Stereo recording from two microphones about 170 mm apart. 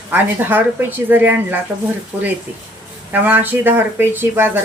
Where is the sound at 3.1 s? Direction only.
10° right (ahead or behind).